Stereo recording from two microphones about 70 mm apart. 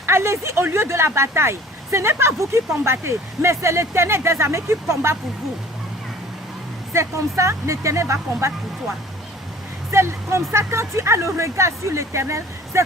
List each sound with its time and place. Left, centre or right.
0.0 s speech: right
6.9 s speech: right
9.9 s speech: right